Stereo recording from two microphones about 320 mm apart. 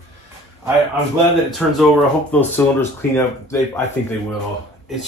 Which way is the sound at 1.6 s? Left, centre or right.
Centre.